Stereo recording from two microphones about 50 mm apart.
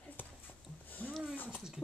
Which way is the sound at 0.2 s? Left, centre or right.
Left.